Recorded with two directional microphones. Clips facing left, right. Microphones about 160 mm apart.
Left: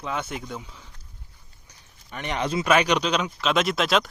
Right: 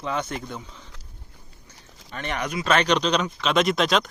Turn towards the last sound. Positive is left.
turn(degrees=0)  # may be behind; listen again after turning